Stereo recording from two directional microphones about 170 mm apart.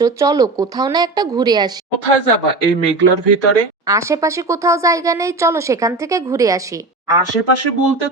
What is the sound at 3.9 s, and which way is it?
Speech, 20° right (ahead or behind).